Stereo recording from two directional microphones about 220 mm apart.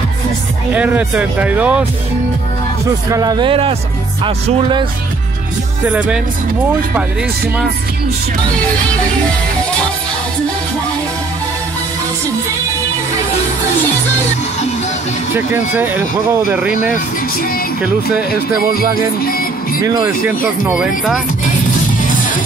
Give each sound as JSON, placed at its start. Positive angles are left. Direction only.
{"t": 0.7, "sound": "speech", "side_deg": -5}
{"t": 3.1, "sound": "speech", "side_deg": -15}
{"t": 15.3, "sound": "speech", "side_deg": -10}
{"t": 18.8, "sound": "music", "side_deg": 40}
{"t": 19.8, "sound": "speech", "side_deg": -10}